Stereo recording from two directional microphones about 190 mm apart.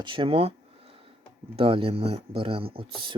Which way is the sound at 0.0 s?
25° right (ahead or behind).